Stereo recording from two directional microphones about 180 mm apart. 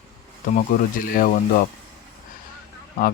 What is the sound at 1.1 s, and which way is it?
Speech, 50° left (ahead or behind).